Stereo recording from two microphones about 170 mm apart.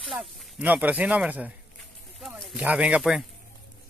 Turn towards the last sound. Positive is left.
turn(degrees=-5)  # may be behind; listen again after turning